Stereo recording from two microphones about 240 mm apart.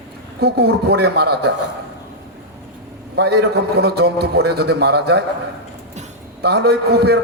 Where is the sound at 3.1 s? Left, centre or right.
Right.